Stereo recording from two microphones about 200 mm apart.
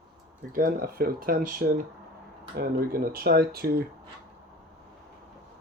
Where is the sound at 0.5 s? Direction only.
45° right (ahead or behind).